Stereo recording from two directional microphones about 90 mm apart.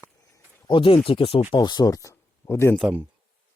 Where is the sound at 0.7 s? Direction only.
75° left (ahead or behind); by 1.4 s 90° left.